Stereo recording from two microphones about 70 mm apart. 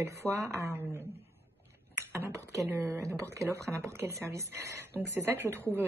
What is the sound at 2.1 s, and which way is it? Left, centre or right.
A woman's voice, right.